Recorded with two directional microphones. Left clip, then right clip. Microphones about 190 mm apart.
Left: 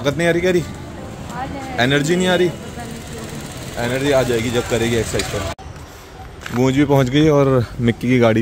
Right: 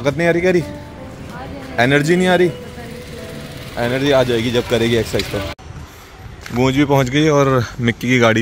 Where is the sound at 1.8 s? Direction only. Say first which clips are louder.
Right 3 dB; 40° right (ahead or behind).